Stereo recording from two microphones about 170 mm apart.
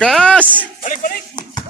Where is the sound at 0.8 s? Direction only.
50° left (ahead or behind).